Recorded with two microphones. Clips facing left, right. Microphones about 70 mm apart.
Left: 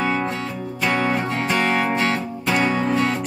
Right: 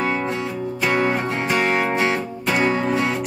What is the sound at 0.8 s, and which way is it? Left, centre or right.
Music, centre.